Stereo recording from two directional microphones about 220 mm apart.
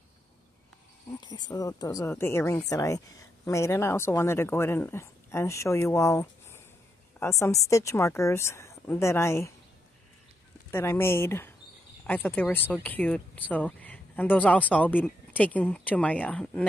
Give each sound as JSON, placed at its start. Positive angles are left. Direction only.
{"t": 1.2, "sound": "speech", "side_deg": 15}
{"t": 10.7, "sound": "speech", "side_deg": 10}